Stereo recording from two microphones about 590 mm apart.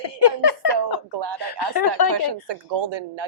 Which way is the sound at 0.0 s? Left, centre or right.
Left.